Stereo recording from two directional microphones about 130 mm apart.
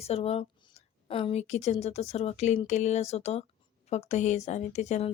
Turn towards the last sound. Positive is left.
turn(degrees=60)  # may be behind; listen again after turning